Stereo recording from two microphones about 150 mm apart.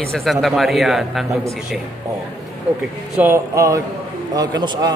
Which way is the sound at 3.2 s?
20° right (ahead or behind).